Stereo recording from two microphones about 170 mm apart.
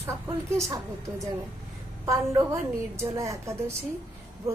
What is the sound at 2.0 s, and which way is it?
A woman's voice, 15° right (ahead or behind).